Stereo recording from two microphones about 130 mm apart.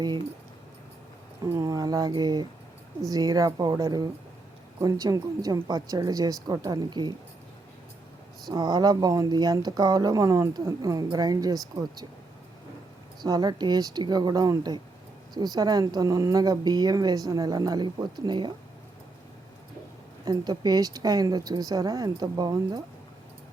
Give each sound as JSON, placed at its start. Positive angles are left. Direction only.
{"t": 1.5, "sound": "speech", "side_deg": -25}
{"t": 8.4, "sound": "speech", "side_deg": -30}
{"t": 13.2, "sound": "speech", "side_deg": -30}
{"t": 20.2, "sound": "speech", "side_deg": -30}